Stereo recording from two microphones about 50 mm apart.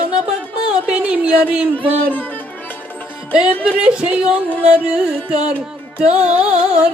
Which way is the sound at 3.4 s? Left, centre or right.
Centre.